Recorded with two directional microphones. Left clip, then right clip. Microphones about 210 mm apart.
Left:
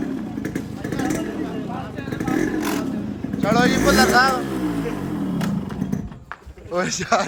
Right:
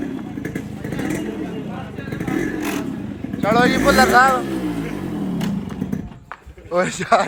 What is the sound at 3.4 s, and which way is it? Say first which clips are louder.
Speech: right 2 dB; 10° left (ahead or behind).